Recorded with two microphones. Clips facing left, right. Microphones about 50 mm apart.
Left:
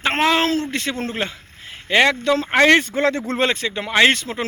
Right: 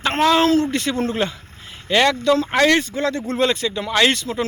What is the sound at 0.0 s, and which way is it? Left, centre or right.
Speech, centre.